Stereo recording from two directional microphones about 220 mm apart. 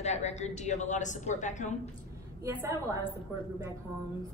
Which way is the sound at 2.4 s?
15° right (ahead or behind).